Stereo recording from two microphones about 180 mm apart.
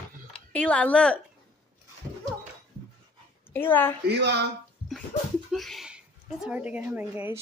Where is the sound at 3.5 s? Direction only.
10° left (ahead or behind).